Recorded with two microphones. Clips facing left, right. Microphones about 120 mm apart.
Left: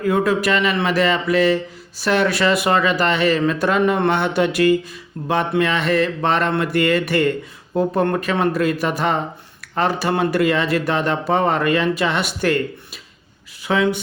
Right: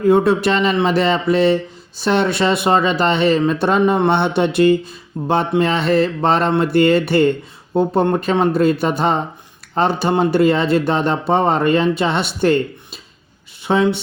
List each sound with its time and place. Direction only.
0.0 s speech: 30° right (ahead or behind)